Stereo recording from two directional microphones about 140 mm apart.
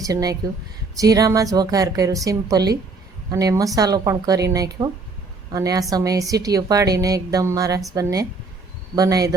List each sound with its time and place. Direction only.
0.0 s a woman's voice: 25° right (ahead or behind)